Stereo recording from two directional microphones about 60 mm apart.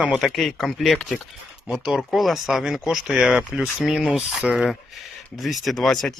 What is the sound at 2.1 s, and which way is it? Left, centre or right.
Speech, centre.